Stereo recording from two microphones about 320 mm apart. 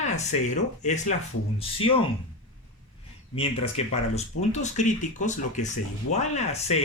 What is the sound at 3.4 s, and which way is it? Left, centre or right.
Speech, centre.